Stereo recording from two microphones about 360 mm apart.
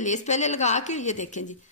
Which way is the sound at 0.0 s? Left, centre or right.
Centre.